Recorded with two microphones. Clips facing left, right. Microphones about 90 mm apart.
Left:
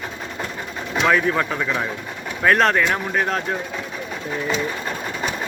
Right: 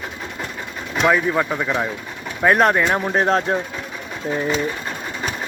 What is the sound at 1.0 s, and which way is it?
Speech, 10° right (ahead or behind).